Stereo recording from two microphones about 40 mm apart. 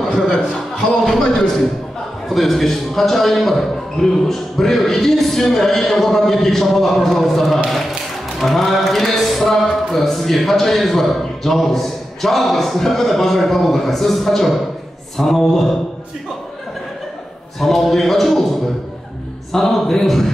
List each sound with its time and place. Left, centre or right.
0.3 s a man's voice: left
2.2 s a man's voice: centre
17.6 s a man's voice: centre
19.5 s a man's voice: centre